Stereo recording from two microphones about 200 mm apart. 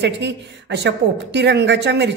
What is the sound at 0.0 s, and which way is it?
A woman's voice, 60° right (ahead or behind).